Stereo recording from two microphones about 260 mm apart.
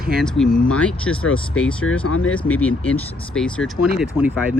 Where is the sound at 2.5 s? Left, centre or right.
Centre.